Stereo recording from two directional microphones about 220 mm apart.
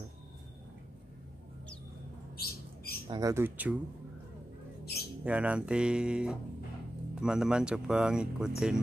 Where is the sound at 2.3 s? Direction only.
45° left (ahead or behind).